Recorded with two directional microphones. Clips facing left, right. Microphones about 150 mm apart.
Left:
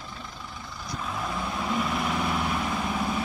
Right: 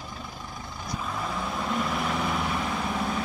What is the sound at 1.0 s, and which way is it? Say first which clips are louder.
Vehicle: left 1 dB; centre (ahead or behind).